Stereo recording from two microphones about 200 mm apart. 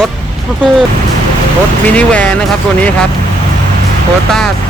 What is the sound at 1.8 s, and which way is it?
Speech, 5° left (ahead or behind).